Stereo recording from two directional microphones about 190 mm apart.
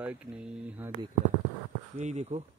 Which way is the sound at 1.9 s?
35° right (ahead or behind).